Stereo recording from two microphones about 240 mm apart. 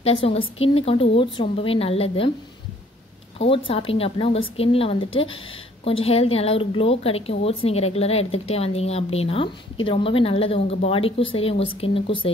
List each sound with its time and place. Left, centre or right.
0.0 s a woman's voice: left
3.3 s a woman's voice: left